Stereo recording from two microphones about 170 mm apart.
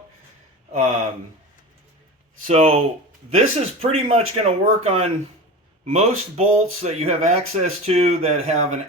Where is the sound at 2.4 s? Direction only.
40° right (ahead or behind).